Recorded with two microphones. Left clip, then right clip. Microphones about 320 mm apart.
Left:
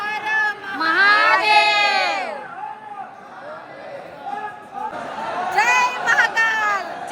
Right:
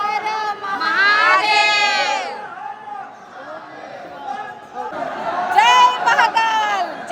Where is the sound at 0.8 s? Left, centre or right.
Centre.